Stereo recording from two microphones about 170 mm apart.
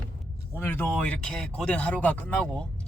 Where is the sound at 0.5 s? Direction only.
15° left (ahead or behind).